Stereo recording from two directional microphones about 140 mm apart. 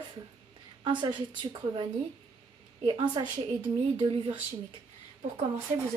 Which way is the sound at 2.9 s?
30° right (ahead or behind).